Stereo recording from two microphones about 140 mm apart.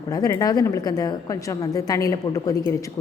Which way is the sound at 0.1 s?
25° left (ahead or behind).